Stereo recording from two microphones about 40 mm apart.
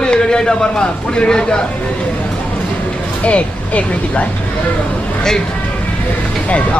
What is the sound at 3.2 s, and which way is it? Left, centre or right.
Speech, left.